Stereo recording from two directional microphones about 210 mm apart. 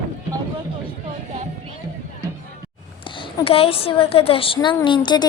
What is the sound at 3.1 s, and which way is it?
A woman's voice, 25° left (ahead or behind).